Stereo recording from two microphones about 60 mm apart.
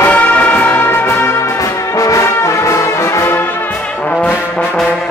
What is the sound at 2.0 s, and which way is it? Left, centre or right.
Brass instrument, left.